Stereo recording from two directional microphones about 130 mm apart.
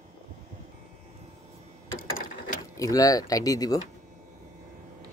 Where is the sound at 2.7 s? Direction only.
25° left (ahead or behind).